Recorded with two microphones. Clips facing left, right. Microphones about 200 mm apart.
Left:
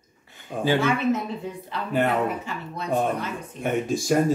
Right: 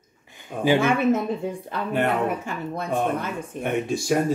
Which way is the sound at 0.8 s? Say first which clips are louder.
Right 2 dB; 50° right (ahead or behind).